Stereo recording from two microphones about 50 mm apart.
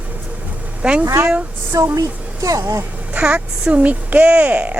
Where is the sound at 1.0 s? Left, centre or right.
Right.